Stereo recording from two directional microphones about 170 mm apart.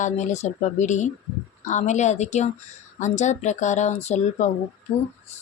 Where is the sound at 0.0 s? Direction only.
45° left (ahead or behind).